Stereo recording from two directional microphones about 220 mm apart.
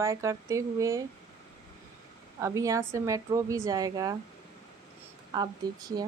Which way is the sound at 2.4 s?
15° right (ahead or behind).